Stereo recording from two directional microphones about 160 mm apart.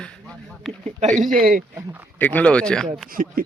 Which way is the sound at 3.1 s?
60° right (ahead or behind).